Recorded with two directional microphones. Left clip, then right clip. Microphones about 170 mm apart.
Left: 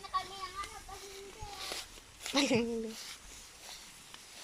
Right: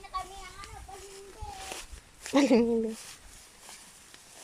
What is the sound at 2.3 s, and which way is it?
Speech, 30° right (ahead or behind).